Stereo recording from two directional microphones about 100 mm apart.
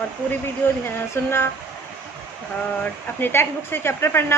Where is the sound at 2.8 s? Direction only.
20° left (ahead or behind).